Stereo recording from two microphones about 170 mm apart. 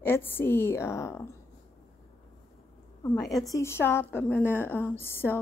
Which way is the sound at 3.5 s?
15° left (ahead or behind).